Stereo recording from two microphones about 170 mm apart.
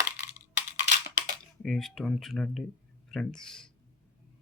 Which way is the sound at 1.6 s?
Centre (ahead or behind).